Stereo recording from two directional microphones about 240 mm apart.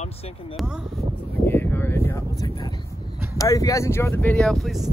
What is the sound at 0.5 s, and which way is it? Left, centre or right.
Speech, centre.